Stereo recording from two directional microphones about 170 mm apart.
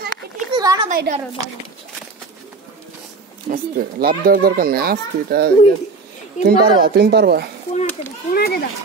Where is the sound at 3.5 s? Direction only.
60° right (ahead or behind).